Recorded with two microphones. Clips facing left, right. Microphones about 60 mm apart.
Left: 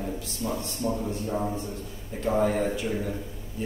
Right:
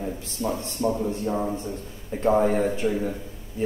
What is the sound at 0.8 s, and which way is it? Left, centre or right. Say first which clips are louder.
Speech: right 5 dB; right.